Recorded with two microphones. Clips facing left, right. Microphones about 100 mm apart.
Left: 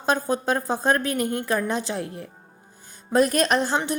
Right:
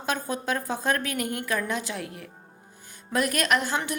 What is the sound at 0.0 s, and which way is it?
A woman's voice, 30° left (ahead or behind).